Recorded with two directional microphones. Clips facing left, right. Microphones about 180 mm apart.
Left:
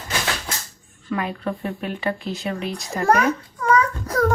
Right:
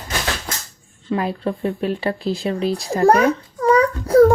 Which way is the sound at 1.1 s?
30° right (ahead or behind).